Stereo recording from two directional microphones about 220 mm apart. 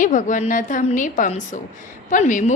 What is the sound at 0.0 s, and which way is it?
A woman's voice, 35° left (ahead or behind).